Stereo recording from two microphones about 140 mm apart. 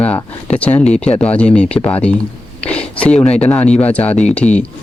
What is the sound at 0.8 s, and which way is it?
Speech, 50° left (ahead or behind).